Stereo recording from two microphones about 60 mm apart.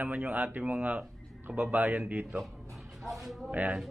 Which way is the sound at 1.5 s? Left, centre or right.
Centre.